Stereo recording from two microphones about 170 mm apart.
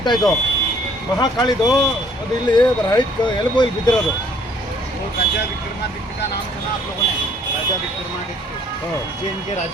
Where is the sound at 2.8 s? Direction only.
25° left (ahead or behind).